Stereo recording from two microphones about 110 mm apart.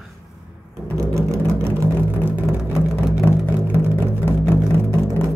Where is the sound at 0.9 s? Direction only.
30° right (ahead or behind).